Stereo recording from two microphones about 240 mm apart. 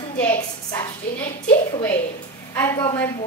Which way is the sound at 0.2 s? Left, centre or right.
Centre.